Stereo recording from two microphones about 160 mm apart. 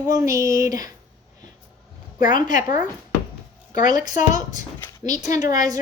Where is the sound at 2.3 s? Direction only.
55° left (ahead or behind).